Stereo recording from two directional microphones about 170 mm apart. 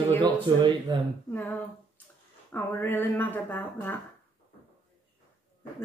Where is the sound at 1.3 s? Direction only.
10° left (ahead or behind).